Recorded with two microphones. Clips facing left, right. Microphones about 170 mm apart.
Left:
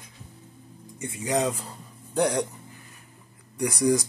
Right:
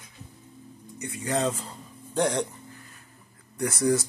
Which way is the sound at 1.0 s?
20° left (ahead or behind).